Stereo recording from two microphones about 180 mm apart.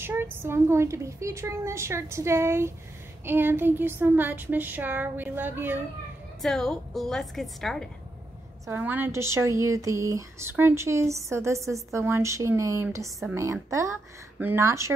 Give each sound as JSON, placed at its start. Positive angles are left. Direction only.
{"t": 0.0, "sound": "a woman's voice", "side_deg": -10}
{"t": 6.4, "sound": "a woman's voice", "side_deg": 5}
{"t": 8.6, "sound": "a woman's voice", "side_deg": -10}